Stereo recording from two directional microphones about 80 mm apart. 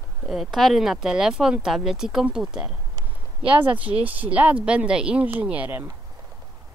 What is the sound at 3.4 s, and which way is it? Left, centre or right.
Speech, centre.